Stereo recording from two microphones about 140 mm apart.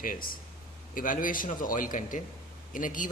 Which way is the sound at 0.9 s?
75° left (ahead or behind).